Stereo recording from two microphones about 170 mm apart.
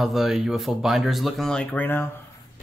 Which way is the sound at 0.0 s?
Centre (ahead or behind).